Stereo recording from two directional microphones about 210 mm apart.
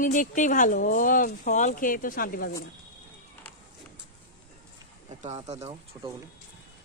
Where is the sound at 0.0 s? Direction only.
40° left (ahead or behind).